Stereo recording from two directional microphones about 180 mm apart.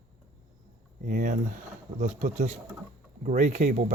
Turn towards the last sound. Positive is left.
turn(degrees=-45)  # may be behind; listen again after turning